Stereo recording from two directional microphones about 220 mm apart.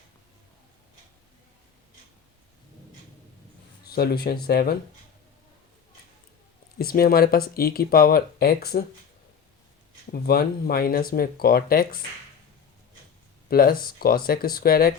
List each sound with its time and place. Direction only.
3.8 s speech: 45° left (ahead or behind)
6.7 s speech: 45° left (ahead or behind)
10.1 s speech: 45° left (ahead or behind)
13.5 s speech: 40° left (ahead or behind)